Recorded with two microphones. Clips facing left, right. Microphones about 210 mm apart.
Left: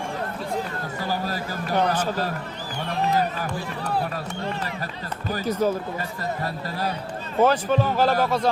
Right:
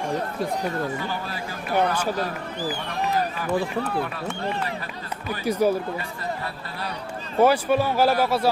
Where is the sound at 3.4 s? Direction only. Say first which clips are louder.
Right 5 dB; 40° left (ahead or behind).